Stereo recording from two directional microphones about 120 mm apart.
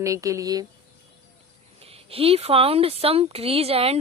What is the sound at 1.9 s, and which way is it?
Speech, 55° right (ahead or behind).